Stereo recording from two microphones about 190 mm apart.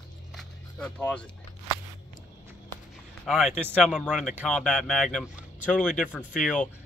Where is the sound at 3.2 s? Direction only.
Centre (ahead or behind).